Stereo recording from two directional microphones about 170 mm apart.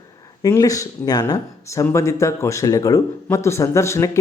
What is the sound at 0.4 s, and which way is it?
Speech, 20° left (ahead or behind).